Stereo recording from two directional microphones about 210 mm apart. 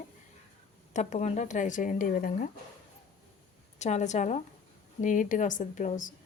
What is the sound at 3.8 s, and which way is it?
Speech, 35° left (ahead or behind).